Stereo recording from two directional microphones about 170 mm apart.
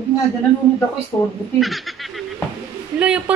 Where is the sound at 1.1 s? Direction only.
15° left (ahead or behind).